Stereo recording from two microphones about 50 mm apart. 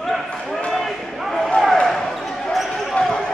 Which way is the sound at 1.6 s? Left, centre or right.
Centre.